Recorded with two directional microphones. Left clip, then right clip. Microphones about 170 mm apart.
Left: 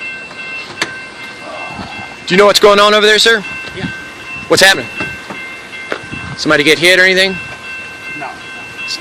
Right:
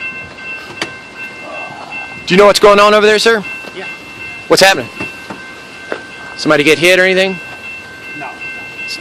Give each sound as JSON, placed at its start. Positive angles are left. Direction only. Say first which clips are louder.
{"t": 2.2, "sound": "speech", "louder": "right 1 dB", "side_deg": -20}
{"t": 4.4, "sound": "speech", "louder": "even", "side_deg": -15}
{"t": 6.4, "sound": "speech", "louder": "even", "side_deg": -15}